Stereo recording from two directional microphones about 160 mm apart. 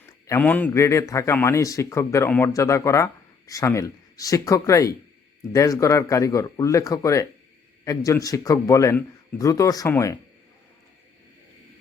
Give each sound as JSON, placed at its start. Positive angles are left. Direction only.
{"t": 0.3, "sound": "a man's voice", "side_deg": 10}